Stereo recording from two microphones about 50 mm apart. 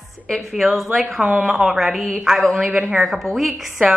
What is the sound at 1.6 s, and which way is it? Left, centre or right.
Speech, centre.